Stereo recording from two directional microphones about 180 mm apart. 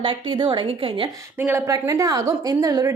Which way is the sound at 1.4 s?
15° right (ahead or behind).